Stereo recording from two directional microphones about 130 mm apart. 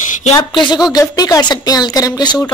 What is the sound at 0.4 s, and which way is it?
A woman's voice, 35° left (ahead or behind).